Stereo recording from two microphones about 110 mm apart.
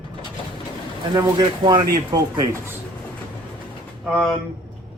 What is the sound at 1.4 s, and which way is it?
Speech, 50° right (ahead or behind).